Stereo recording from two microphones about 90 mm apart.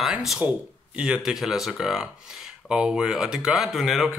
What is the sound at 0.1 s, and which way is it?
Speech, 10° right (ahead or behind).